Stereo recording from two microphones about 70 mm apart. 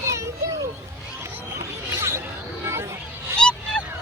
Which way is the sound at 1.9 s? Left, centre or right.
Right.